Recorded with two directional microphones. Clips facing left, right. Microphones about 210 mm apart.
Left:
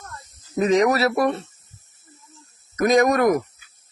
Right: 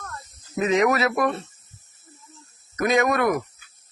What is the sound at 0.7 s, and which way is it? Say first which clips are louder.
Speech: left 2 dB; 35° left (ahead or behind).